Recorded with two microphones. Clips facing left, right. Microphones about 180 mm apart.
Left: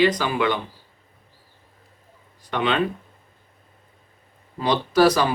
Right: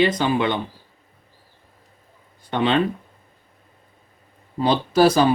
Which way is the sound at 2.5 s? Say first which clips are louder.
Right 3 dB; 30° right (ahead or behind).